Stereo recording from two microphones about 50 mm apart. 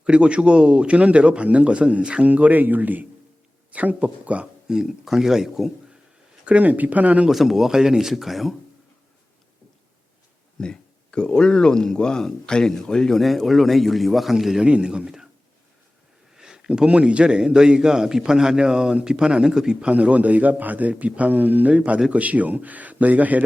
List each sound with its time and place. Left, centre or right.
0.0 s a man's voice: right
2.2 s a man's voice: right
4.7 s a man's voice: centre
6.4 s speech: right
7.3 s a man's voice: centre
10.6 s a sound: centre
11.3 s speech: centre
13.2 s a man's voice: centre
14.7 s a man's voice: centre
16.3 s a man's voice: centre
19.9 s speech: right